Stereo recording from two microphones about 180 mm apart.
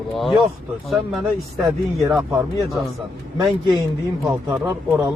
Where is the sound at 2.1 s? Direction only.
10° right (ahead or behind).